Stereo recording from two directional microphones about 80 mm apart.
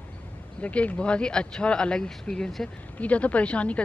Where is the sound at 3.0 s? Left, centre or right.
Centre.